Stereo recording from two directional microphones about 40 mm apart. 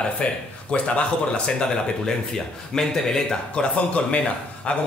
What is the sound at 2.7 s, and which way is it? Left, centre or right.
Speech, centre.